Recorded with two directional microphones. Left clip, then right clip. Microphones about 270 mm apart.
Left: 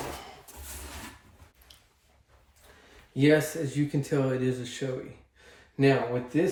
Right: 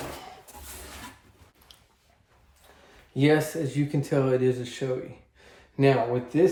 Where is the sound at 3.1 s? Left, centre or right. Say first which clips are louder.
Right 1 dB; centre.